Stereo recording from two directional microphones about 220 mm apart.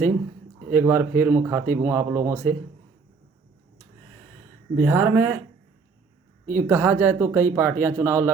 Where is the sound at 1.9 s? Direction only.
10° right (ahead or behind).